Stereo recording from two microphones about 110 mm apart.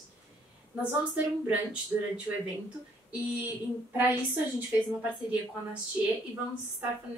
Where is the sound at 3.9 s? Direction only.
15° right (ahead or behind).